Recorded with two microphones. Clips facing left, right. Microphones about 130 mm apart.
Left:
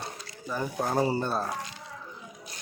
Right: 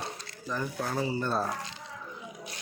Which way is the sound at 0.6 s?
35° left (ahead or behind).